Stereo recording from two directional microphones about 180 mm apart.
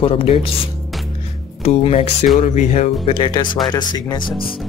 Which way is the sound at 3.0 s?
30° left (ahead or behind).